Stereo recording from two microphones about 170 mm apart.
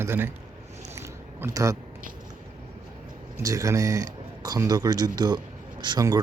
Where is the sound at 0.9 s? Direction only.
15° right (ahead or behind).